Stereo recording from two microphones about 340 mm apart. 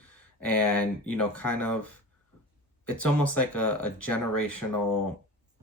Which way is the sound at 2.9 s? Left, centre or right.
Centre.